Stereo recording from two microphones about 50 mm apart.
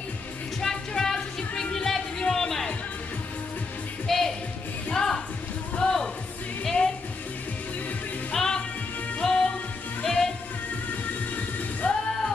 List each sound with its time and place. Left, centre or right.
0.6 s music: centre
4.1 s music: centre
8.3 s music: centre
11.3 s music: left